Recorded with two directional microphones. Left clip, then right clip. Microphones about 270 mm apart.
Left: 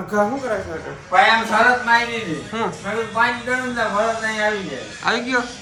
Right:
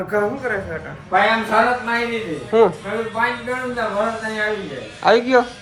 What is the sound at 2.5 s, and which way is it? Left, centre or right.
Speech, centre.